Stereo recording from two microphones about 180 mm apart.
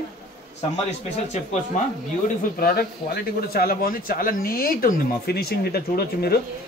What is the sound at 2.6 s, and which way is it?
Speech, 60° left (ahead or behind).